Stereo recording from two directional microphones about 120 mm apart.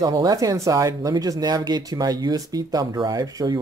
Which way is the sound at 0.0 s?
30° right (ahead or behind).